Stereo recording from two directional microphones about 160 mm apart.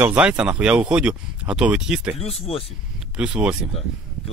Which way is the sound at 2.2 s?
40° left (ahead or behind).